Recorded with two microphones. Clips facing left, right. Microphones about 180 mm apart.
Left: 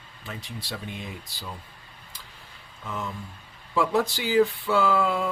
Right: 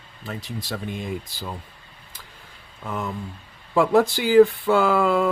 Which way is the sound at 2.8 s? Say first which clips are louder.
Right 5 dB; 55° right (ahead or behind).